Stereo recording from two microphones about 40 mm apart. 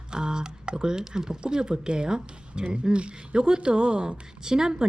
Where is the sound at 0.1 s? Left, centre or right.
Centre.